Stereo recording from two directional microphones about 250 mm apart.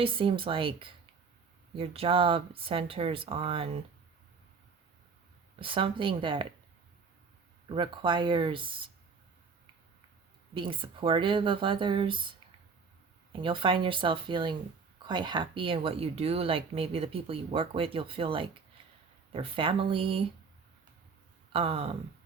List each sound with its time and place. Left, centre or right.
0.0 s speech: right
5.5 s speech: right
7.7 s speech: centre
10.5 s speech: centre
13.3 s speech: centre
21.5 s speech: right